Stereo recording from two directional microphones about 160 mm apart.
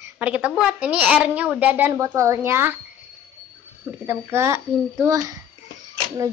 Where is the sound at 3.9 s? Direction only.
15° right (ahead or behind).